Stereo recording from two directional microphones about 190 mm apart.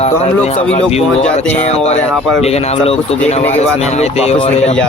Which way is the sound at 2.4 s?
35° left (ahead or behind).